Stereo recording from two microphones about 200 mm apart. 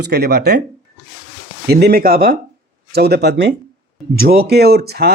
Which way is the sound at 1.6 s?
55° right (ahead or behind).